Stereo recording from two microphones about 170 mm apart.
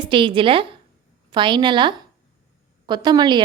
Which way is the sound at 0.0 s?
30° right (ahead or behind).